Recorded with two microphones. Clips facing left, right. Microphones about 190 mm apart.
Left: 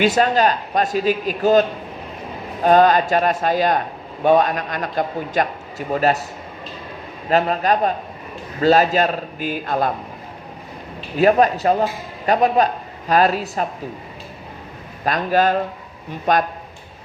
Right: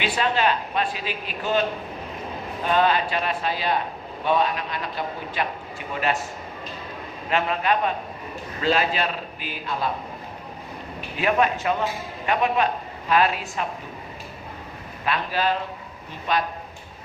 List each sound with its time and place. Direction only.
0.0 s a man's voice: 45° left (ahead or behind)
2.6 s a man's voice: 45° left (ahead or behind)
7.3 s a man's voice: 40° left (ahead or behind)
11.2 s a man's voice: 40° left (ahead or behind)
15.0 s a man's voice: 45° left (ahead or behind)